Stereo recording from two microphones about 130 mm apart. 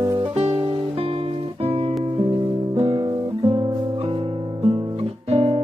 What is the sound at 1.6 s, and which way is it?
Music, 50° right (ahead or behind).